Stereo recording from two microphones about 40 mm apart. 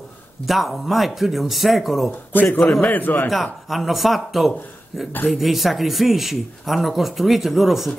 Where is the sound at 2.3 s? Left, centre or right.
Left.